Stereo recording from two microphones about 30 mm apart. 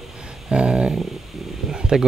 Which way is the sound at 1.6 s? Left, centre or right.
Right.